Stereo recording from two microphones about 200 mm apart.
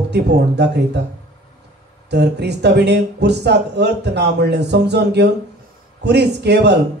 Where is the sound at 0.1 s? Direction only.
55° right (ahead or behind).